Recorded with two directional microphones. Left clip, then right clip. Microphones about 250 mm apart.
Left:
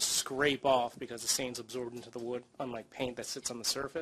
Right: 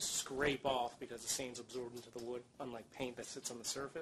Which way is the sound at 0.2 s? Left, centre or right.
Left.